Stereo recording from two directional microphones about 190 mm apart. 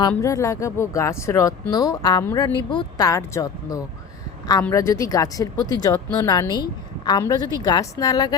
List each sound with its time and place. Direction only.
0.1 s speech: 15° left (ahead or behind)